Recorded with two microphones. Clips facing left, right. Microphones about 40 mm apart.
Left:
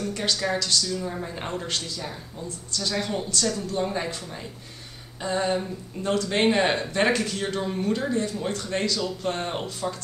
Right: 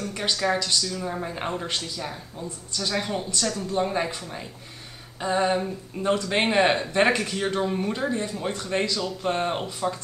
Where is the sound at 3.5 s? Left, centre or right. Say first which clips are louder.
Right 2 dB; right.